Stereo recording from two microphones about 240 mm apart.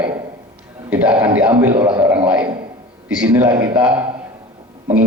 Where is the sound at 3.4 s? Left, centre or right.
Centre.